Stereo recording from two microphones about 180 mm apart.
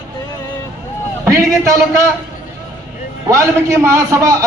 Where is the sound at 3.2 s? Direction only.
15° right (ahead or behind).